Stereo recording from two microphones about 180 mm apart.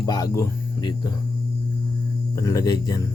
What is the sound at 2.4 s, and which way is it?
Speech, 20° left (ahead or behind).